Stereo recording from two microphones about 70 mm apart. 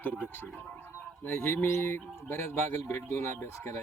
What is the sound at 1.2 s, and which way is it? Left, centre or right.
Speech, left.